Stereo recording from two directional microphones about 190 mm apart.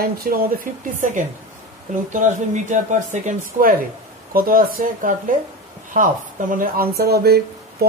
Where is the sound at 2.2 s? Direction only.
40° right (ahead or behind).